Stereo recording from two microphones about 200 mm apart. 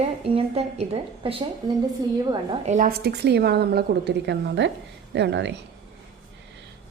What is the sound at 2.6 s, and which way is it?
A woman's voice, 40° right (ahead or behind).